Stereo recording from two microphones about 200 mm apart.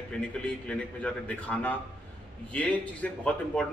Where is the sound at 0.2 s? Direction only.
5° left (ahead or behind).